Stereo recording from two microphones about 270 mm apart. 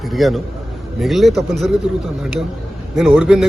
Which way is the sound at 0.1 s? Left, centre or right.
Centre.